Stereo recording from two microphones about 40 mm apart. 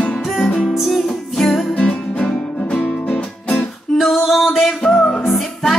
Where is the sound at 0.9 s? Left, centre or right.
Centre.